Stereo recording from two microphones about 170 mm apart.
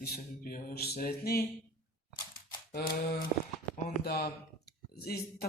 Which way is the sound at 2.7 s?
70° left (ahead or behind).